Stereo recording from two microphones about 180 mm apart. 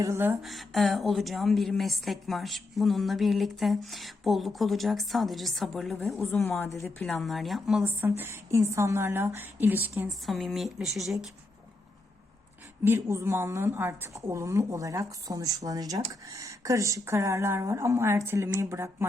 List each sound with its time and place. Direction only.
0.0 s a woman's voice: 15° right (ahead or behind)
0.4 s a woman's voice: centre (ahead or behind)
10.2 s a woman's voice: centre (ahead or behind)
12.8 s a woman's voice: 15° right (ahead or behind)